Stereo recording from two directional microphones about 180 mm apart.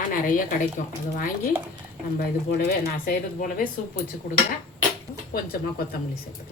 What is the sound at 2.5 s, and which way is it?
A woman's voice, 50° left (ahead or behind).